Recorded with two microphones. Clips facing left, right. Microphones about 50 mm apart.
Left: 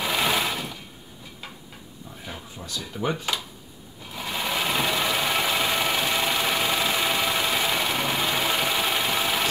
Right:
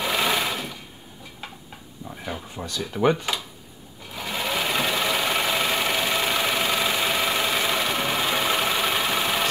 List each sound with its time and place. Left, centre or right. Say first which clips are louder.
0.0 s sewing machine: right 1 dB; centre
2.5 s a sound: right 3 dB; right
2.9 s speech: right 7 dB; right
4.1 s sewing machine: right 1 dB; centre